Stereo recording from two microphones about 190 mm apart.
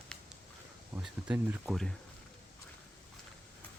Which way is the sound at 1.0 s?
5° right (ahead or behind).